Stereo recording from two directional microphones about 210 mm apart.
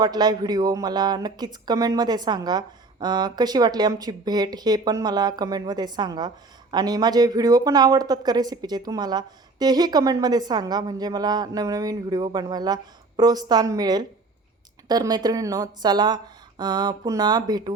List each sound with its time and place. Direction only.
0.0 s speech: 20° right (ahead or behind)